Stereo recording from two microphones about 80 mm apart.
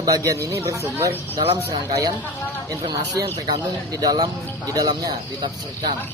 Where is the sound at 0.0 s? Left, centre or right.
Right.